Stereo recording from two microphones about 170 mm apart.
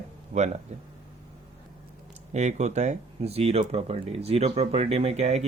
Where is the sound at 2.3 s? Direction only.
45° right (ahead or behind).